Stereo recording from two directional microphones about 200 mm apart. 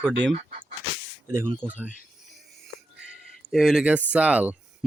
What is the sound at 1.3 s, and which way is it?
Speech, 10° right (ahead or behind).